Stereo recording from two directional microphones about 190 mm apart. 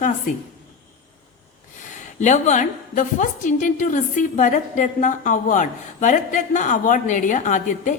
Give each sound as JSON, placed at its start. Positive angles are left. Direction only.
{"t": 2.1, "sound": "a woman's voice", "side_deg": 40}